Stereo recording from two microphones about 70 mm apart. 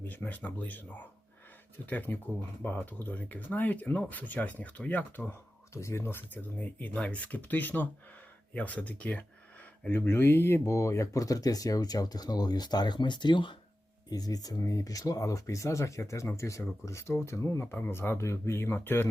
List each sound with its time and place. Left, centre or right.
0.1 s speech: left
5.7 s speech: left
9.9 s speech: left
14.1 s speech: left